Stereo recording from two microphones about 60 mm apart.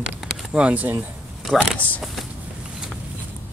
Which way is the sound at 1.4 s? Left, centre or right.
Centre.